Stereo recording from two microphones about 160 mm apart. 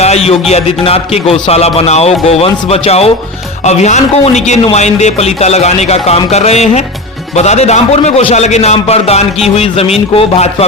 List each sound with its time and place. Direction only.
0.0 s speech: 40° left (ahead or behind)